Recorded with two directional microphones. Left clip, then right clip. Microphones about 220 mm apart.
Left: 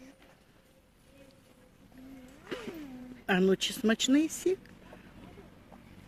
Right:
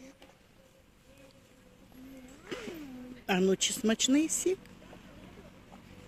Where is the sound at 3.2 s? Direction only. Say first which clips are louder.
Left 1 dB; 15° left (ahead or behind).